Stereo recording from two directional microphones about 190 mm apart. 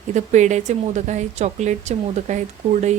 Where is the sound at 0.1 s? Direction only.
40° right (ahead or behind).